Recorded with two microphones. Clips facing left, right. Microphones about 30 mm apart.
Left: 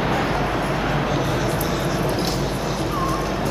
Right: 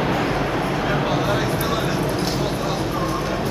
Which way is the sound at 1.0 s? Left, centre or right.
Centre.